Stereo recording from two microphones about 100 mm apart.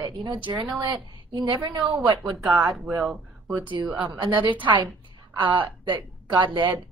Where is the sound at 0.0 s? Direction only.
45° right (ahead or behind).